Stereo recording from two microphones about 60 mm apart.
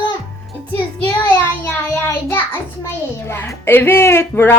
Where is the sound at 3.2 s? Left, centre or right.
Left.